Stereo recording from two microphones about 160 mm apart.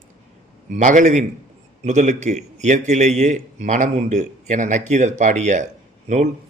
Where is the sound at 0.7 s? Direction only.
50° right (ahead or behind).